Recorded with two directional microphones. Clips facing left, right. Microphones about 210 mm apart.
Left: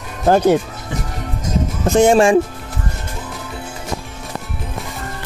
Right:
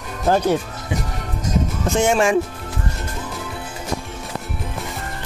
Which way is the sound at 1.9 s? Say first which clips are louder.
Left 7 dB; 35° left (ahead or behind).